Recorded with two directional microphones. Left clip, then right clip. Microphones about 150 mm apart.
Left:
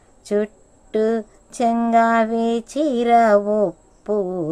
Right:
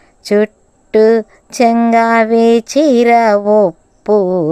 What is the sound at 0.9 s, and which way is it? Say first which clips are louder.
Speech: right 11 dB; 45° right (ahead or behind).